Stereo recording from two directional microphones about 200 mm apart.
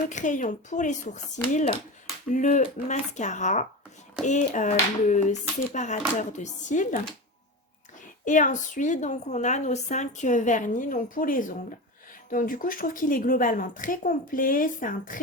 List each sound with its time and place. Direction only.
0.1 s a woman's voice: 40° left (ahead or behind)
2.3 s a woman's voice: 40° left (ahead or behind)
8.2 s a woman's voice: 40° left (ahead or behind)